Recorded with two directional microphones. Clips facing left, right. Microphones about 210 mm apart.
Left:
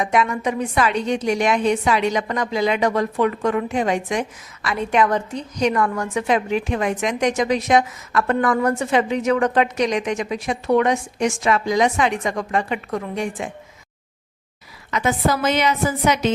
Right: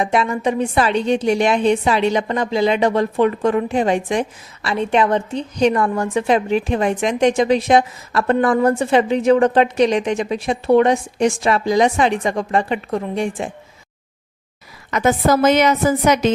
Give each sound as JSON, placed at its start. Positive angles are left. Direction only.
{"t": 0.0, "sound": "a woman's voice", "side_deg": -30}
{"t": 14.8, "sound": "a woman's voice", "side_deg": -45}